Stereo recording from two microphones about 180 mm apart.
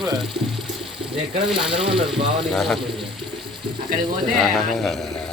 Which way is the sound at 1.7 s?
30° right (ahead or behind).